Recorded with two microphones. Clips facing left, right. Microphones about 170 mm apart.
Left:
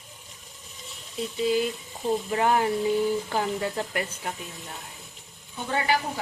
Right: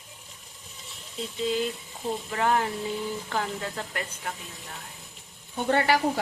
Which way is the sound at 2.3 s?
15° left (ahead or behind).